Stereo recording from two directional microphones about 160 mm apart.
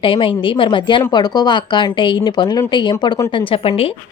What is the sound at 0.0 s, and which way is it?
A woman's voice, 30° left (ahead or behind).